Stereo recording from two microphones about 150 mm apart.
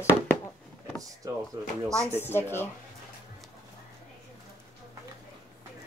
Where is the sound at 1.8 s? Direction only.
20° right (ahead or behind).